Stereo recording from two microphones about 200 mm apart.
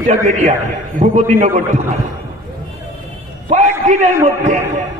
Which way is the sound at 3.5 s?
35° right (ahead or behind).